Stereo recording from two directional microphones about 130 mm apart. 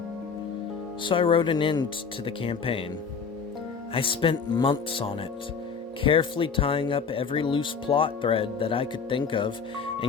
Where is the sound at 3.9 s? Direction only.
45° left (ahead or behind).